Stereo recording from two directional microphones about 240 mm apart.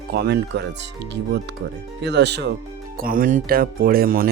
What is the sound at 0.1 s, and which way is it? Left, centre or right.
Speech, right.